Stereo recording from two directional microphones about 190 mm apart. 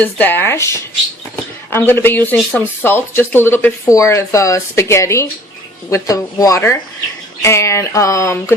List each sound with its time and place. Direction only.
0.0 s speech: 10° left (ahead or behind)